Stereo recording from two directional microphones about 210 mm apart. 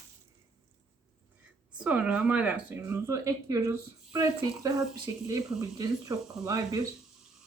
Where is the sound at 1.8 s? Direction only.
5° right (ahead or behind).